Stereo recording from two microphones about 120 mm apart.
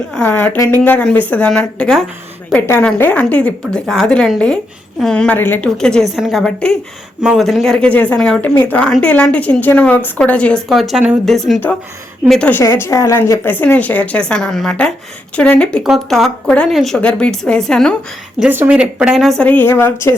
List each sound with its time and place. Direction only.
0.1 s a woman's voice: 10° left (ahead or behind)
12.5 s a woman's voice: 20° left (ahead or behind)
18.3 s speech: 15° right (ahead or behind)
19.4 s a woman's voice: 15° left (ahead or behind)